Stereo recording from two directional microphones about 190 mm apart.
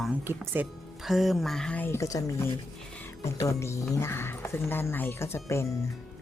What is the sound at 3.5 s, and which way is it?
Speech, 15° left (ahead or behind).